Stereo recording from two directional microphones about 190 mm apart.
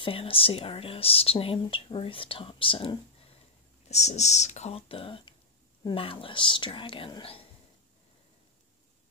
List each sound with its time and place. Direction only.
0.0 s speech: 30° left (ahead or behind)